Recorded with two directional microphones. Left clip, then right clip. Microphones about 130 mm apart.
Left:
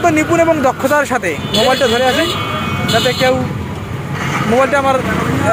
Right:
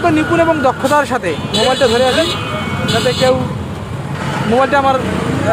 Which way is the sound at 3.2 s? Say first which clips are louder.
Right 2 dB; 5° right (ahead or behind).